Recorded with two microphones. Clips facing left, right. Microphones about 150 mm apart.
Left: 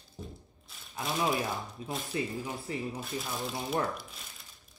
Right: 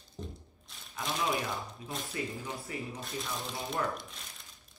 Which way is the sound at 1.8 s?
Centre (ahead or behind).